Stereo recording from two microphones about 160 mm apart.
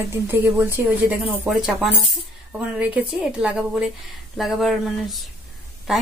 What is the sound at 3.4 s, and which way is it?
Speech, 5° right (ahead or behind).